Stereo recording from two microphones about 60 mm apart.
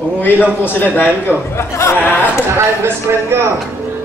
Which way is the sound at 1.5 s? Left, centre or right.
Left.